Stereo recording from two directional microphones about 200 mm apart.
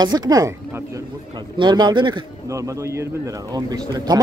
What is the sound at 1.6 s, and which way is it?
Speech, 20° right (ahead or behind).